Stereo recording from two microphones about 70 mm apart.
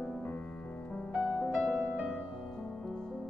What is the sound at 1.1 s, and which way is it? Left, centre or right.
Music, centre.